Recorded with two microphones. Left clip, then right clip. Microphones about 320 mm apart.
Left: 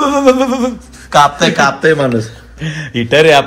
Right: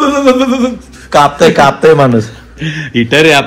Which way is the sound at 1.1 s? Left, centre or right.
Centre.